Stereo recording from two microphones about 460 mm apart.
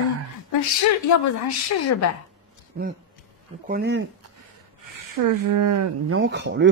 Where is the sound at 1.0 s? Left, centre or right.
Left.